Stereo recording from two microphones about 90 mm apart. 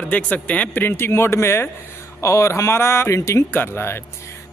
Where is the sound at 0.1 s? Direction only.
15° left (ahead or behind).